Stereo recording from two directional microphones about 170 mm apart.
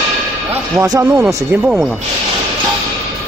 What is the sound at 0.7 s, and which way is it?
Speech, 20° right (ahead or behind).